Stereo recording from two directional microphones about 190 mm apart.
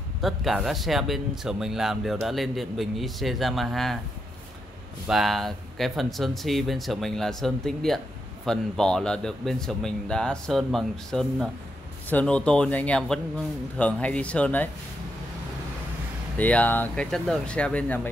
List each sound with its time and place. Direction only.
0.2 s speech: centre (ahead or behind)
5.0 s speech: centre (ahead or behind)
16.3 s speech: 10° left (ahead or behind)